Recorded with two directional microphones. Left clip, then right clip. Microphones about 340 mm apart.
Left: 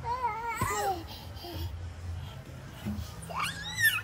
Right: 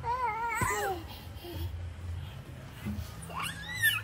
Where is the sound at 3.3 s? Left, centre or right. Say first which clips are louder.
Left 3 dB; centre.